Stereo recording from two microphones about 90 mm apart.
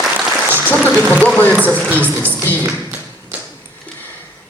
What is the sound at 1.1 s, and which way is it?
Speech, 15° left (ahead or behind).